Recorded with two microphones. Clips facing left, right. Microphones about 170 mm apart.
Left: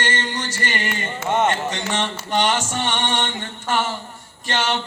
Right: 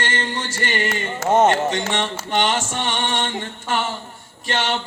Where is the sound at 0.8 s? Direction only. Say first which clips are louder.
Right 3 dB; 40° right (ahead or behind).